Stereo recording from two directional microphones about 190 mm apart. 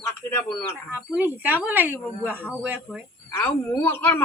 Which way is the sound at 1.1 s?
10° right (ahead or behind).